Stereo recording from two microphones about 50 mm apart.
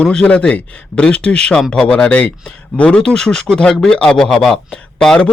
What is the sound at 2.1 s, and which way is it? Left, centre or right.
A man's voice, left.